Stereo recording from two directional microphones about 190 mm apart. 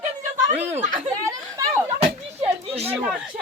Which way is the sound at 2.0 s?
30° right (ahead or behind).